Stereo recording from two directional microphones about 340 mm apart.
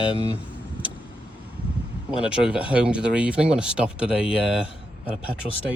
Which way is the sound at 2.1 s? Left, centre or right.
Centre.